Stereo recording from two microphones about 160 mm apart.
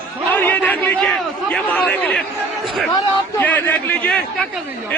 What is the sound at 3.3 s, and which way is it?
A man's voice, 10° left (ahead or behind).